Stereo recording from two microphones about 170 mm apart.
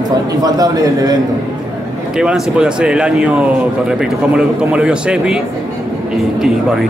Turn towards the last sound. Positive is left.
turn(degrees=-5)  # may be behind; listen again after turning